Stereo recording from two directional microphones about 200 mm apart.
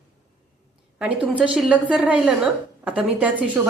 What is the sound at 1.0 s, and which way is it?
A woman's voice, 5° right (ahead or behind).